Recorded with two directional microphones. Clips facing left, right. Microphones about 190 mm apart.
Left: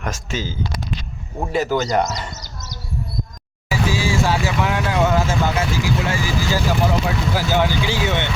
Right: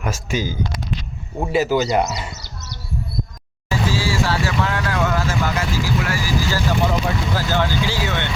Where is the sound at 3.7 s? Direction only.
15° left (ahead or behind).